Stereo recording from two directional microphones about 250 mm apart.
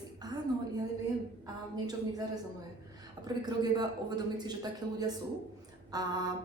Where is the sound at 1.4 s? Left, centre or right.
Centre.